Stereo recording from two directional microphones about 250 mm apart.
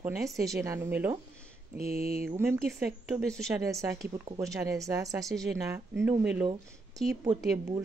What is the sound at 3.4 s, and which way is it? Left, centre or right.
A woman's voice, centre.